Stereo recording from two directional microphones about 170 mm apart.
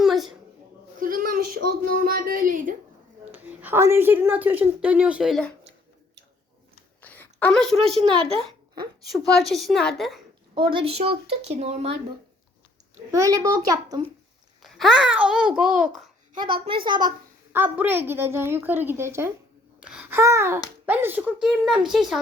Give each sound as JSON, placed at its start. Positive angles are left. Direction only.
{"t": 0.0, "sound": "a sound", "side_deg": 0}
{"t": 0.9, "sound": "a sound", "side_deg": -55}
{"t": 3.2, "sound": "a woman's voice", "side_deg": -10}
{"t": 7.0, "sound": "a sound", "side_deg": 10}
{"t": 9.1, "sound": "a child's voice", "side_deg": 0}
{"t": 10.5, "sound": "speech", "side_deg": -30}
{"t": 13.1, "sound": "a child's voice", "side_deg": -20}
{"t": 14.6, "sound": "a child's voice", "side_deg": 0}
{"t": 16.3, "sound": "a woman's voice", "side_deg": -25}
{"t": 17.5, "sound": "a woman's voice", "side_deg": -10}
{"t": 19.8, "sound": "babbling", "side_deg": -5}
{"t": 20.8, "sound": "a woman's voice", "side_deg": -10}